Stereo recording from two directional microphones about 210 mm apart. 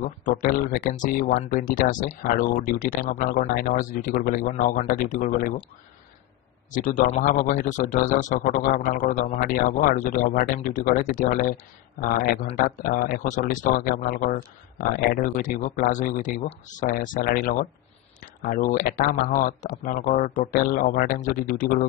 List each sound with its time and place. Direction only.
0.2 s speech: 40° left (ahead or behind)
6.7 s speech: 35° left (ahead or behind)
12.4 s speech: 40° left (ahead or behind)